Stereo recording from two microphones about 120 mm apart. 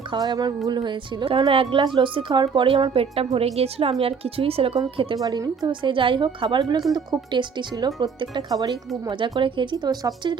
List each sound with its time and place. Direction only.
0.1 s a woman's voice: 35° right (ahead or behind); by 4.8 s 55° right (ahead or behind)
5.1 s a woman's voice: 30° right (ahead or behind)